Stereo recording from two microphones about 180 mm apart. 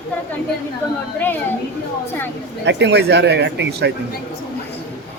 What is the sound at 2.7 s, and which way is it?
Speech, 75° right (ahead or behind).